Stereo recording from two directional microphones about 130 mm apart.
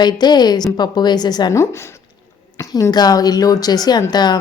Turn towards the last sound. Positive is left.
turn(degrees=30)  # may be behind; listen again after turning